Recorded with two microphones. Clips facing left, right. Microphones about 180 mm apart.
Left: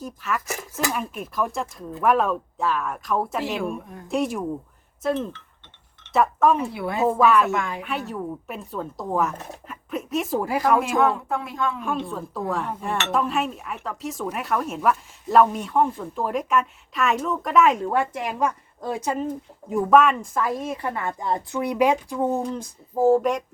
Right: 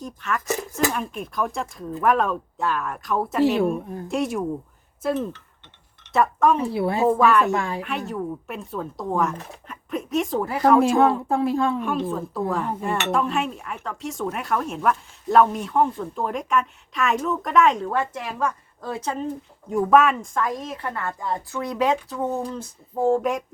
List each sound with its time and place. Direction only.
0.0 s speech: 5° left (ahead or behind)
6.7 s speech: 30° right (ahead or behind)
7.1 s speech: centre (ahead or behind)
7.5 s speech: 35° right (ahead or behind)
7.8 s speech: centre (ahead or behind)
10.8 s speech: 30° right (ahead or behind)
11.8 s a woman's voice: centre (ahead or behind); by 23.0 s 15° left (ahead or behind)
23.0 s speech: centre (ahead or behind)